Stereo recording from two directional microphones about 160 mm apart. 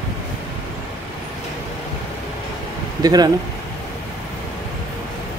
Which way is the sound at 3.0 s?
25° right (ahead or behind).